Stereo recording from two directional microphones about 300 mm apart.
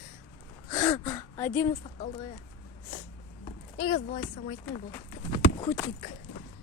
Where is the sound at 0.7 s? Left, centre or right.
Centre.